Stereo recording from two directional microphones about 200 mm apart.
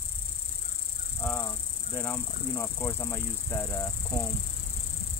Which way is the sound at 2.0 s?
10° left (ahead or behind).